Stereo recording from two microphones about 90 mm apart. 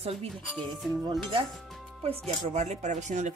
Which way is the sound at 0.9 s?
45° right (ahead or behind).